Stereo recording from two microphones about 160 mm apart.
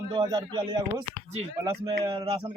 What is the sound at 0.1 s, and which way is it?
A man's voice, 30° right (ahead or behind).